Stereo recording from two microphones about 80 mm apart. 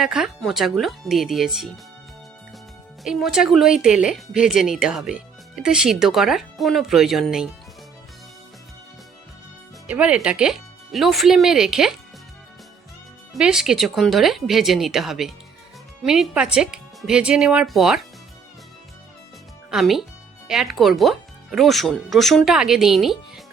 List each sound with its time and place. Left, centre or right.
0.0 s speech: centre
3.0 s speech: centre
9.8 s speech: centre
13.4 s speech: centre
19.7 s speech: centre